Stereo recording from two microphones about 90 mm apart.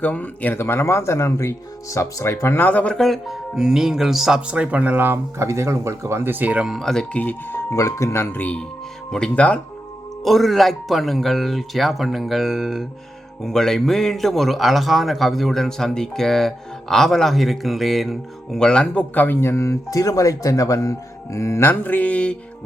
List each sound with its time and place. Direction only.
0.0 s speech: 15° left (ahead or behind); by 6.7 s 15° right (ahead or behind)
6.7 s speech: 5° left (ahead or behind)
7.2 s speech: 20° left (ahead or behind)
7.7 s speech: 35° left (ahead or behind); by 9.6 s 15° left (ahead or behind)
10.2 s speech: centre (ahead or behind)